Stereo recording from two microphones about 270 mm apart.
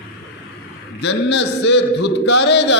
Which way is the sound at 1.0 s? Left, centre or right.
Left.